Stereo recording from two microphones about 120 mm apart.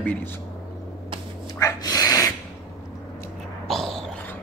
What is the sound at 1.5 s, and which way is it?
Dog, 30° left (ahead or behind).